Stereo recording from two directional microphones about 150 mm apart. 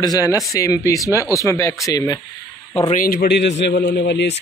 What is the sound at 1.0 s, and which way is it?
Speech, 20° right (ahead or behind).